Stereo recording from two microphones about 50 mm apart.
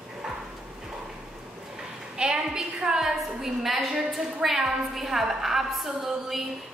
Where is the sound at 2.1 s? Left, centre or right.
Centre.